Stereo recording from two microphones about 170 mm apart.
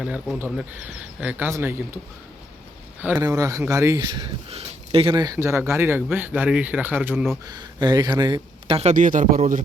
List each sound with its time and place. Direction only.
0.0 s speech: 5° right (ahead or behind)
3.2 s speech: 20° right (ahead or behind)
7.4 s speech: 25° right (ahead or behind); by 9.6 s 50° right (ahead or behind)